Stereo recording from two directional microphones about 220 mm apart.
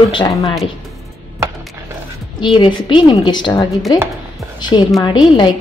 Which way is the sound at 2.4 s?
20° left (ahead or behind).